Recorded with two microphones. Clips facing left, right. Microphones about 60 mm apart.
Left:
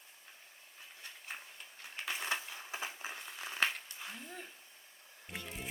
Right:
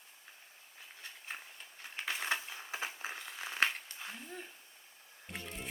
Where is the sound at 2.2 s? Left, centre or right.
Right.